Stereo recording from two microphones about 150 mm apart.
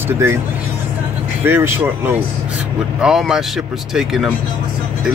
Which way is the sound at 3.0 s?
5° right (ahead or behind).